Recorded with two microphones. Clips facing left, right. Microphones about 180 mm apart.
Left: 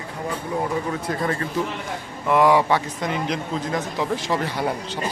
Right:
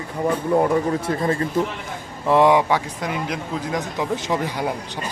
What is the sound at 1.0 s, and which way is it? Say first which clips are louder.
Speech: right 3 dB; 25° right (ahead or behind).